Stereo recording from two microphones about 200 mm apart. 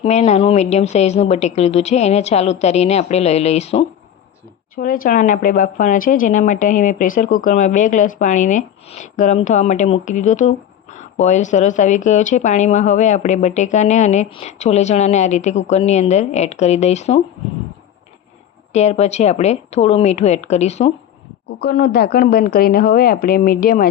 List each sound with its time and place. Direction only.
0.0 s speech: 35° left (ahead or behind)
4.7 s speech: 45° left (ahead or behind)
18.7 s speech: 35° left (ahead or behind)
21.6 s a woman's voice: 50° left (ahead or behind)